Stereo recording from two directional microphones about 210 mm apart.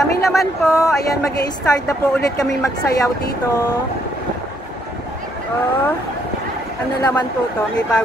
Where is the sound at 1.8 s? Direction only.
15° left (ahead or behind).